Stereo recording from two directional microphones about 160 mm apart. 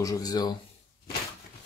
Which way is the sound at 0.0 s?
25° left (ahead or behind).